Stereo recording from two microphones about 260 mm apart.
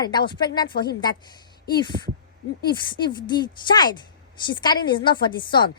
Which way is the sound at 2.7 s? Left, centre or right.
Centre.